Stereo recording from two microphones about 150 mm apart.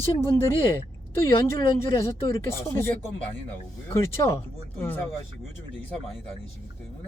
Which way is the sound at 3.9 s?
20° left (ahead or behind).